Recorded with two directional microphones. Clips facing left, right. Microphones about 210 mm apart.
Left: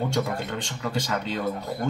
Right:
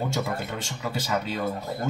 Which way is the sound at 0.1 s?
5° right (ahead or behind).